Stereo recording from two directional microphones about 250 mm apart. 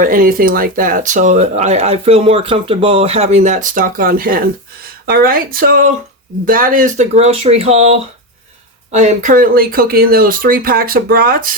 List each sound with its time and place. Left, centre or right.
0.0 s speech: right